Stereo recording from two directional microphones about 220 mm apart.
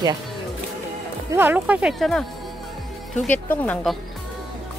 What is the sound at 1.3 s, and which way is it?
Speech, 10° right (ahead or behind).